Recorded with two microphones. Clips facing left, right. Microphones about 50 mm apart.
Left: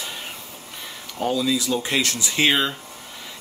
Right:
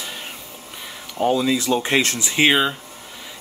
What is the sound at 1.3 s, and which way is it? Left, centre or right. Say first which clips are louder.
Speech: right 3 dB; right.